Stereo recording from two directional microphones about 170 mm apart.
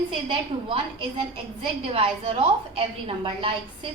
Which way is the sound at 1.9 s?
35° right (ahead or behind).